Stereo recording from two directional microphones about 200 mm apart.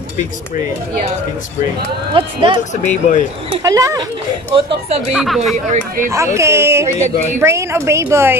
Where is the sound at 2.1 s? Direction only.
25° right (ahead or behind).